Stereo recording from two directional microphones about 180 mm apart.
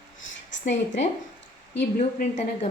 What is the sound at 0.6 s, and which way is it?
Speech, 40° left (ahead or behind).